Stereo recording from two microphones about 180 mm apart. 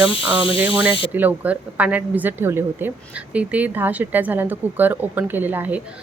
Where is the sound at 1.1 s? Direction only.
10° right (ahead or behind).